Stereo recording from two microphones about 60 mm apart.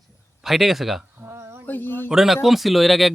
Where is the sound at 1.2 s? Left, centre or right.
Right.